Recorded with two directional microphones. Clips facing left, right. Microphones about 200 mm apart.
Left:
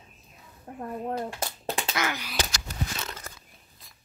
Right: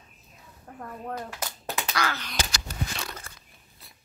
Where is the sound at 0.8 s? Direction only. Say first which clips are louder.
Left 4 dB; 25° left (ahead or behind).